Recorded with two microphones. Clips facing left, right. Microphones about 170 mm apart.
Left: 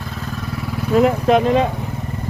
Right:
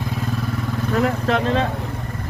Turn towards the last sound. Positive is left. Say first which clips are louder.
# left 5 dB
turn(degrees=15)  # may be behind; listen again after turning